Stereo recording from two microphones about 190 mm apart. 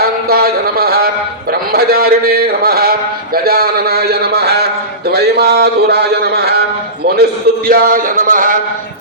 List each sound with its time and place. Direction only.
0.3 s a sound: 55° right (ahead or behind)
1.7 s a man's voice: 50° right (ahead or behind)
7.7 s music: 50° right (ahead or behind)